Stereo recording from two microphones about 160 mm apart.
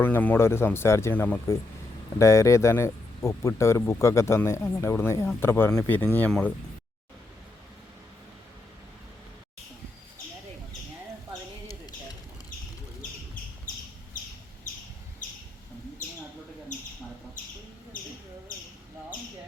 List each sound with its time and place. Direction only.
0.0 s speech: 10° left (ahead or behind)